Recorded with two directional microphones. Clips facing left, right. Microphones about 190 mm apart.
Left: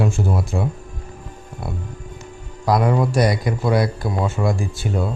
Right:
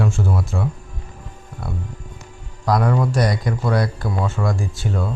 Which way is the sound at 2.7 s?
10° left (ahead or behind).